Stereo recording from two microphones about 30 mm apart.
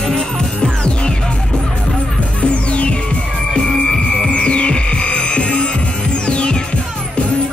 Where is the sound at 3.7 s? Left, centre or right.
Centre.